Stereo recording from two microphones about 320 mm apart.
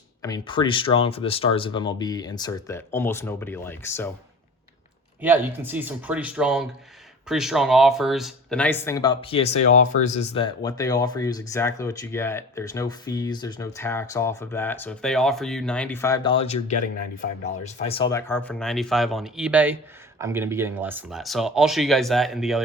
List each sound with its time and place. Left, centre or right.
0.2 s speech: centre
5.2 s speech: centre